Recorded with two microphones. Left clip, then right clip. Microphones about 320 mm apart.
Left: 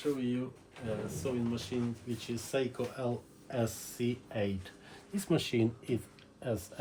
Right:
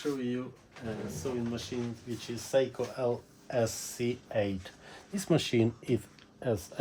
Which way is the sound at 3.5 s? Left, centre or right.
Right.